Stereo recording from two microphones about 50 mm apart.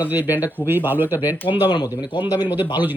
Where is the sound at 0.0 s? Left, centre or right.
Right.